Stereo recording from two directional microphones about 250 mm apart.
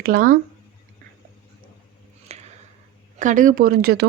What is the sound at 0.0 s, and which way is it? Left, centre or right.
Speech, right.